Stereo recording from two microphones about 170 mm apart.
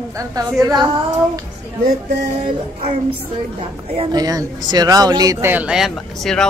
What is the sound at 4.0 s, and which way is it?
Speech, 25° right (ahead or behind).